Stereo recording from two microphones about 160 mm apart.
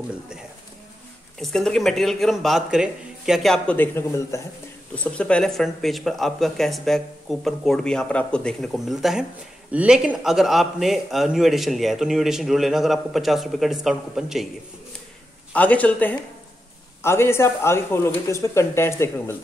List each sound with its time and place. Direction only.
1.4 s a man's voice: 5° left (ahead or behind)
15.5 s speech: 10° left (ahead or behind)